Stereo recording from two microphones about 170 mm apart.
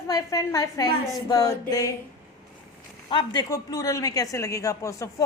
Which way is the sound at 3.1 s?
25° left (ahead or behind).